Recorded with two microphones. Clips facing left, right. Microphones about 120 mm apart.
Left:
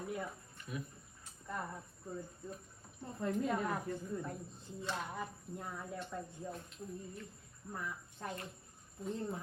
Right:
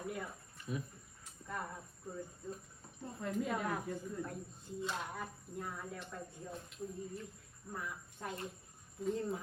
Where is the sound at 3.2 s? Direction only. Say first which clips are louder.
Left 2 dB; centre (ahead or behind).